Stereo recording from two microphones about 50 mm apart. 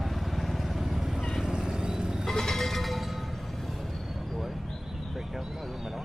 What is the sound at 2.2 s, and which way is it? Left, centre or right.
Music, centre.